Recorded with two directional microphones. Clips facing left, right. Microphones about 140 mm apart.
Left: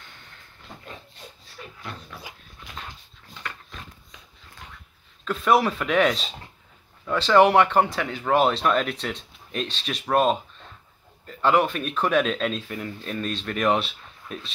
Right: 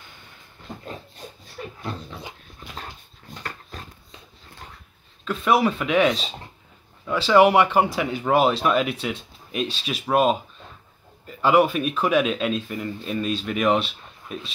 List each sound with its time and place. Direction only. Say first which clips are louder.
1.8 s dog: right 4 dB; 25° right (ahead or behind)
3.4 s dog: right 1 dB; 35° right (ahead or behind)
5.2 s speech: even; centre (ahead or behind)